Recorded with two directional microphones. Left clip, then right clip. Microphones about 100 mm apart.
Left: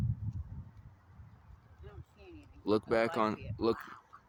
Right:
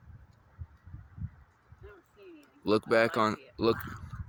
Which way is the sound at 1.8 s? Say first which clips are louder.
Right 4 dB; 25° left (ahead or behind).